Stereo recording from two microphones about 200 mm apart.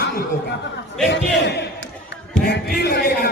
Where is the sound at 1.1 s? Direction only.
55° left (ahead or behind).